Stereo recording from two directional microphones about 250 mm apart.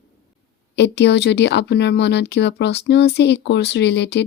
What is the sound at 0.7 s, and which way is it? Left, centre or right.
A woman's voice, left.